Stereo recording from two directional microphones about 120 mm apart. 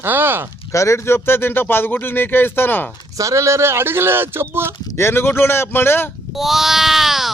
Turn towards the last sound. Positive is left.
turn(degrees=0)  # may be behind; listen again after turning